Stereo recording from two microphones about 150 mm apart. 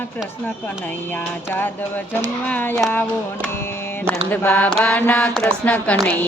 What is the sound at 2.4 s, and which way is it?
Speech, 10° left (ahead or behind).